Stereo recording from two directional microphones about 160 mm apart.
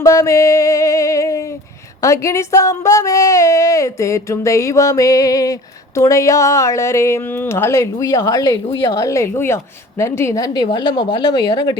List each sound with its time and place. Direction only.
0.0 s music: 20° left (ahead or behind)
2.0 s a woman's voice: 20° left (ahead or behind)